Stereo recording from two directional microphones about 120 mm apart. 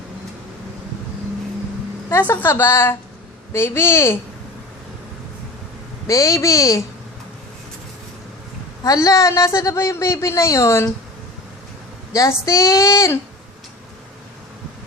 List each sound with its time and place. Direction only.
2.0 s a man's voice: 20° left (ahead or behind)
6.1 s a man's voice: 25° left (ahead or behind)
8.8 s a man's voice: 30° left (ahead or behind)
12.1 s a man's voice: 30° left (ahead or behind)